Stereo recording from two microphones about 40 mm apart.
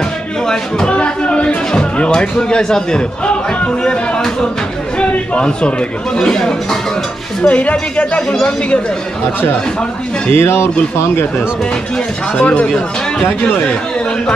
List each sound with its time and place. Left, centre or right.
0.5 s speech: centre
0.9 s a sound: left
2.0 s a man's voice: left
4.9 s a sound: left
6.1 s speech: centre
7.4 s speech: left
8.3 s speech: centre
10.3 s speech: left
12.4 s speech: left